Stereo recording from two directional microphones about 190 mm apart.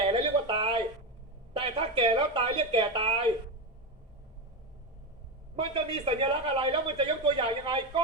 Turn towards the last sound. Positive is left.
turn(degrees=-25)  # may be behind; listen again after turning